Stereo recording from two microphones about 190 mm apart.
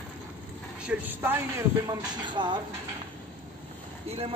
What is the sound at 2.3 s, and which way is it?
Speech, 25° right (ahead or behind).